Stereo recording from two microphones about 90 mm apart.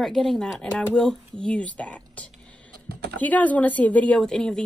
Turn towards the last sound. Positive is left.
turn(degrees=5)  # may be behind; listen again after turning